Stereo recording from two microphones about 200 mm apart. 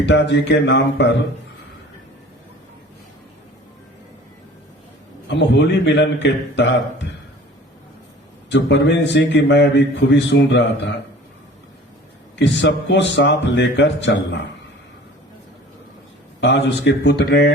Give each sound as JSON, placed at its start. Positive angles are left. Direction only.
{"t": 0.0, "sound": "a man's voice", "side_deg": 60}
{"t": 5.3, "sound": "a man's voice", "side_deg": 60}
{"t": 8.4, "sound": "a man's voice", "side_deg": 60}
{"t": 12.4, "sound": "a man's voice", "side_deg": 65}
{"t": 16.4, "sound": "a man's voice", "side_deg": 60}